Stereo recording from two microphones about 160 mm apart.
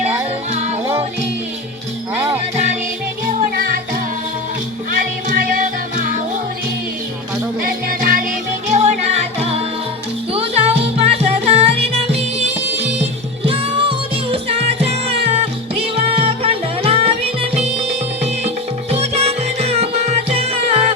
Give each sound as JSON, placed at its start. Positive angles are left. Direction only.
{"t": 2.1, "sound": "jingle bell", "side_deg": -15}
{"t": 4.9, "sound": "music", "side_deg": -55}
{"t": 7.6, "sound": "music", "side_deg": -60}
{"t": 8.7, "sound": "music", "side_deg": -45}